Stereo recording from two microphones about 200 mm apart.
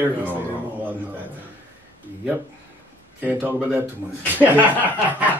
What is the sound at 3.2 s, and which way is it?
Speech, 10° right (ahead or behind).